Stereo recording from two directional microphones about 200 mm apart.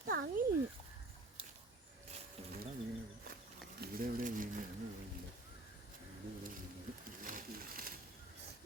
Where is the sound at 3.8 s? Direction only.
45° right (ahead or behind).